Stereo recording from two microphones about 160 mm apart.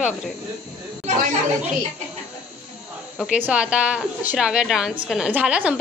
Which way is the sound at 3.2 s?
10° right (ahead or behind).